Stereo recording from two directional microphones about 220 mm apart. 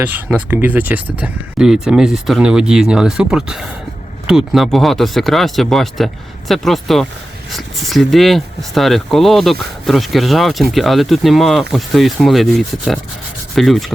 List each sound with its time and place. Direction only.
0.0 s speech: 5° right (ahead or behind)